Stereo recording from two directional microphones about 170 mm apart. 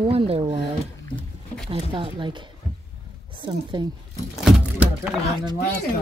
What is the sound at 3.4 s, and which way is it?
Speech, 25° right (ahead or behind).